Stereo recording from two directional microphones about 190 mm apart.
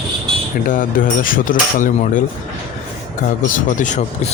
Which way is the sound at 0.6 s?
45° left (ahead or behind).